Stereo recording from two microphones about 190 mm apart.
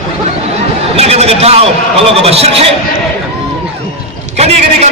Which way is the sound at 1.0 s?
35° right (ahead or behind).